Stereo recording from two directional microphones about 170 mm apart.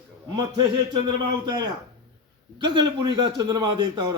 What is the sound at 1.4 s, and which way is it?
A man's voice, 25° right (ahead or behind).